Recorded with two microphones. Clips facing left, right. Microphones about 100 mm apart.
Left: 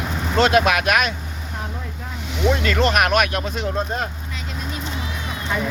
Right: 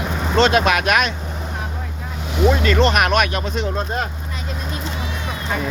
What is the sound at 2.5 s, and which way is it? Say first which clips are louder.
Speech: right 2 dB; centre (ahead or behind).